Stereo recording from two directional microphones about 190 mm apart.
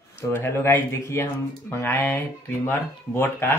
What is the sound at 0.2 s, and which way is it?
Speech, 10° left (ahead or behind).